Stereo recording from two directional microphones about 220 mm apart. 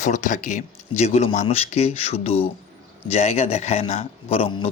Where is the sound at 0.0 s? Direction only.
35° left (ahead or behind).